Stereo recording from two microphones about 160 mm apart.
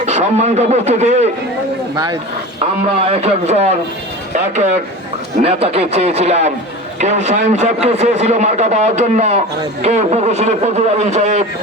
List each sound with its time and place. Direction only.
0.0 s a man's voice: 45° right (ahead or behind)
3.1 s a man's voice: 40° right (ahead or behind)
5.4 s a man's voice: 40° right (ahead or behind)